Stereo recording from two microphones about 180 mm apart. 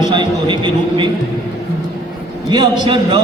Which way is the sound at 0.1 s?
25° right (ahead or behind).